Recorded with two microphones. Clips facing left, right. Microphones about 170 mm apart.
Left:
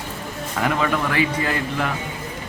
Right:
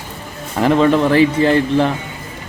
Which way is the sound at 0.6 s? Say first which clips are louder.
Right 9 dB; 30° right (ahead or behind).